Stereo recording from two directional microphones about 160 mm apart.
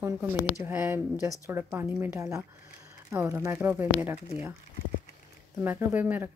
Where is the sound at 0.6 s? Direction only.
15° right (ahead or behind).